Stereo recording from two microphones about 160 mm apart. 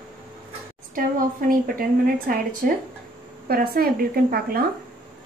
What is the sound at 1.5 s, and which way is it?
Speech, 65° right (ahead or behind).